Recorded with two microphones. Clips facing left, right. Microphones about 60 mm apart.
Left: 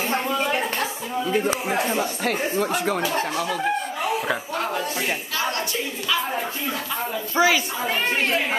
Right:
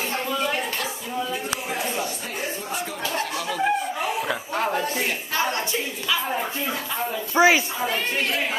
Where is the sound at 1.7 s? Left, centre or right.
Left.